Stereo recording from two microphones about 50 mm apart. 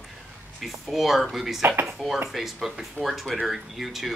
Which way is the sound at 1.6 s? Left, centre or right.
Right.